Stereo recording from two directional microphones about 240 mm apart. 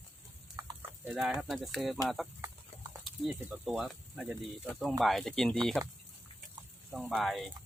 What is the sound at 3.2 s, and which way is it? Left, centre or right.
Speech, centre.